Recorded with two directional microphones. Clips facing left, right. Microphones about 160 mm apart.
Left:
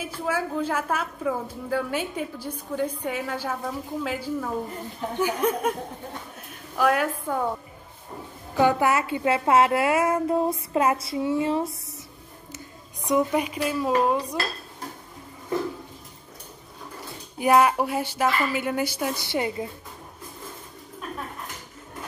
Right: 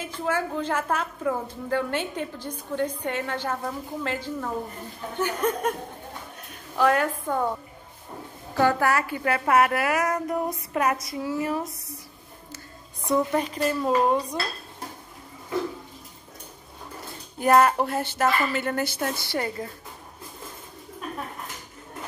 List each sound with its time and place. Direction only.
0.0 s a woman's voice: 10° left (ahead or behind)
6.8 s a woman's voice: 5° left (ahead or behind)
8.5 s a woman's voice: 15° left (ahead or behind)
12.5 s a woman's voice: 15° left (ahead or behind)
17.4 s a woman's voice: 5° left (ahead or behind)